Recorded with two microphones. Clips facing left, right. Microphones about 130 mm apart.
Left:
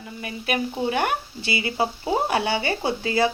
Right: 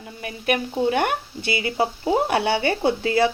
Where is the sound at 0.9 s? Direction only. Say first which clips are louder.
Right 3 dB; 55° right (ahead or behind).